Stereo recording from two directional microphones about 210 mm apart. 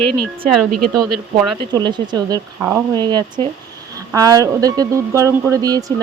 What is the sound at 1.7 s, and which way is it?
Speech, 20° right (ahead or behind).